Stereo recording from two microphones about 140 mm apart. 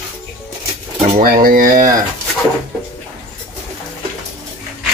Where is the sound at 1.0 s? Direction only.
90° right.